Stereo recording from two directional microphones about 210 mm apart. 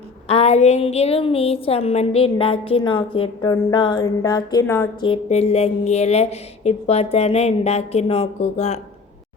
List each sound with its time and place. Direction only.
0.3 s a woman's voice: 30° left (ahead or behind); by 4.9 s 10° left (ahead or behind)
4.9 s speech: 25° left (ahead or behind)